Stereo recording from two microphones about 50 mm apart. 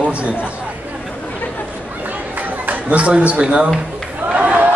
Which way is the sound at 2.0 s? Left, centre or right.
Right.